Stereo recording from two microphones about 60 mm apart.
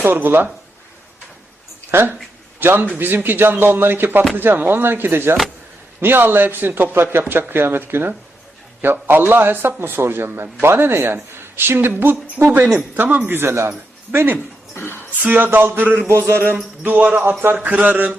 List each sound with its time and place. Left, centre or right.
0.0 s a man's voice: right
1.9 s a man's voice: right
14.8 s speech: left
15.2 s speech: right
15.4 s a man's voice: right
16.8 s a man's voice: right